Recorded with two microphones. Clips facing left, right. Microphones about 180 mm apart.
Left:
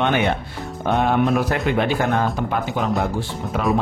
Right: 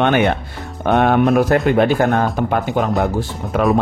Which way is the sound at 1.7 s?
45° right (ahead or behind).